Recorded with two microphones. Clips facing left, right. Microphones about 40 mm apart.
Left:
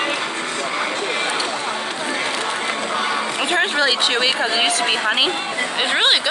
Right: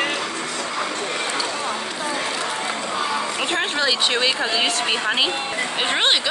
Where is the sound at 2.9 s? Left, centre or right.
Left.